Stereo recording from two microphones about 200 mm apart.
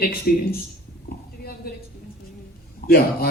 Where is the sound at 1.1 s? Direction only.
50° left (ahead or behind).